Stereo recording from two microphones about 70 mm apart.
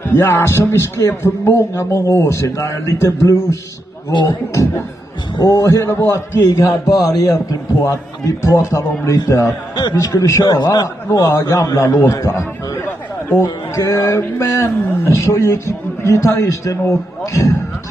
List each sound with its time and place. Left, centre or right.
0.0 s a man's voice: left
4.1 s a man's voice: left
5.3 s a man's voice: left
6.9 s a man's voice: left
7.8 s a man's voice: left
9.8 s a man's voice: left
10.5 s a man's voice: left
11.1 s a man's voice: left